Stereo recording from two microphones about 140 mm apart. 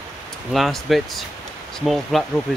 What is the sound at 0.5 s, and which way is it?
Speech, centre (ahead or behind).